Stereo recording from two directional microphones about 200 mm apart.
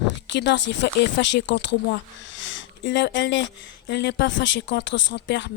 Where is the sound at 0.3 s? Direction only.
65° left (ahead or behind).